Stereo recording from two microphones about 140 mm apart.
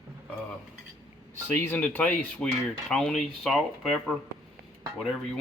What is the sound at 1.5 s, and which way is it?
Speech, 15° left (ahead or behind).